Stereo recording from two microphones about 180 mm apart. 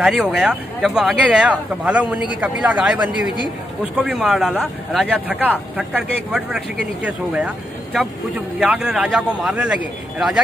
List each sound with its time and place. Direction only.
0.0 s speech: 5° right (ahead or behind)